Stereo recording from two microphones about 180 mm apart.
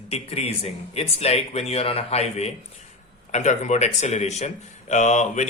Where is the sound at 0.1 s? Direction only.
35° left (ahead or behind).